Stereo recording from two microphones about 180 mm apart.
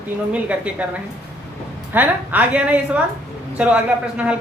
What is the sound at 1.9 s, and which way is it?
A man's voice, 10° right (ahead or behind).